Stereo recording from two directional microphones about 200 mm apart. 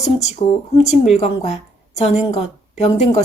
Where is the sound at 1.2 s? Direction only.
35° left (ahead or behind).